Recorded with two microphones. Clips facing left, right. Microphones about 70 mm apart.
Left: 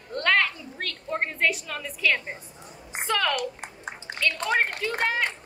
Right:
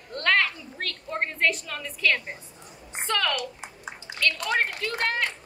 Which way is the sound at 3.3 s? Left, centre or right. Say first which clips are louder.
Left 3 dB; left.